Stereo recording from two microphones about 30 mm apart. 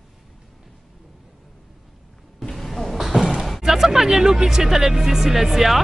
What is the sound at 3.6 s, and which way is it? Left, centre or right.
Speech, centre.